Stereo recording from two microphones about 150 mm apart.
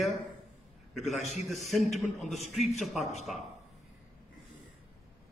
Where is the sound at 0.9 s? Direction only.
Centre (ahead or behind).